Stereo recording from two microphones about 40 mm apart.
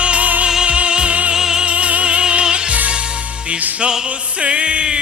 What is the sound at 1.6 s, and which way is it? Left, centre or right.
Music, right.